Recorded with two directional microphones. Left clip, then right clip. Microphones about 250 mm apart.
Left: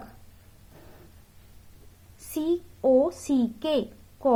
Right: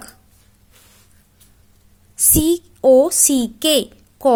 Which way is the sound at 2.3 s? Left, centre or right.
Right.